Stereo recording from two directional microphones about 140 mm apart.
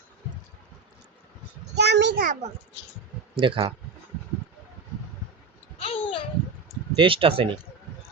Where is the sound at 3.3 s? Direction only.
40° right (ahead or behind).